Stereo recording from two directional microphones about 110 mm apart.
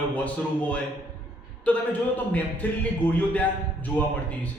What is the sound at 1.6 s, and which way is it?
A man's voice, 15° left (ahead or behind).